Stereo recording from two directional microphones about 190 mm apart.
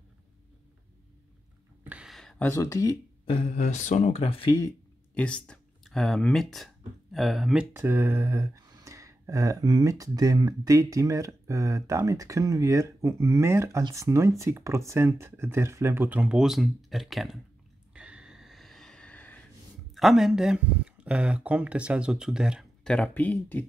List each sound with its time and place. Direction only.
1.9 s a sound: 5° right (ahead or behind); by 3.3 s 20° left (ahead or behind)
3.3 s speech: 40° left (ahead or behind)
5.1 s speech: 5° left (ahead or behind)
7.7 s speech: 10° right (ahead or behind)
17.9 s a sound: 5° right (ahead or behind)
19.9 s speech: centre (ahead or behind)